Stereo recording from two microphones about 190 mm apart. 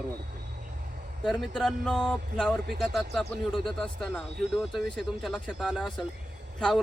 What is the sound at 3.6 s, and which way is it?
Speech, centre (ahead or behind).